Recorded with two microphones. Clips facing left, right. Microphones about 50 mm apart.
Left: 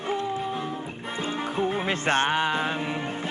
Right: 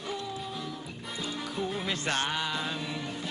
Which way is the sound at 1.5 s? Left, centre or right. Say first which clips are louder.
Left 6 dB; left.